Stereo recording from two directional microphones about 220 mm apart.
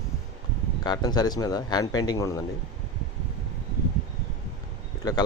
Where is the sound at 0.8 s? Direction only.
20° left (ahead or behind).